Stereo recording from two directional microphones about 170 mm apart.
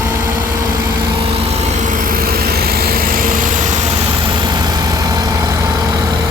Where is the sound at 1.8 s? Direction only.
50° right (ahead or behind).